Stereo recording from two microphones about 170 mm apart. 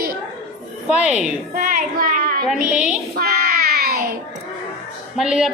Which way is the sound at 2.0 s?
55° right (ahead or behind).